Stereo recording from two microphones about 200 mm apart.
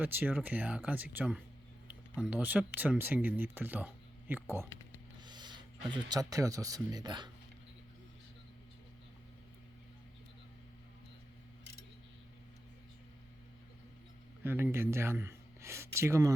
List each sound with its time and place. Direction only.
0.0 s speech: 10° right (ahead or behind)
5.2 s speech: 20° right (ahead or behind)
14.4 s speech: 10° right (ahead or behind)